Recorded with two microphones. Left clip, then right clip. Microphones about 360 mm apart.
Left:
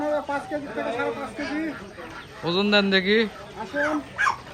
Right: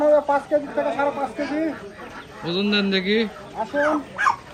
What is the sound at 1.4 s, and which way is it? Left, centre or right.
Speech, right.